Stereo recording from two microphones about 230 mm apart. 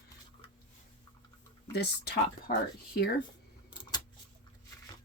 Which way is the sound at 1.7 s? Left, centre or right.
Left.